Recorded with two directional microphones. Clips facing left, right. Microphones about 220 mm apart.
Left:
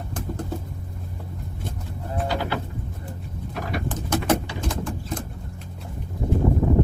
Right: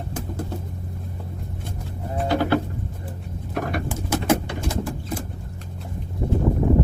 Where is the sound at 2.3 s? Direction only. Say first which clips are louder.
Right 9 dB; 55° right (ahead or behind).